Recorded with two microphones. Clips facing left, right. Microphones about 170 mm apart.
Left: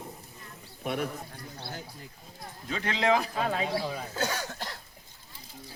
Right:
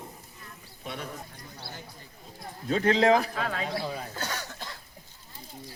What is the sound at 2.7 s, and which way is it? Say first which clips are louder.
Speech: right 5 dB; 40° right (ahead or behind).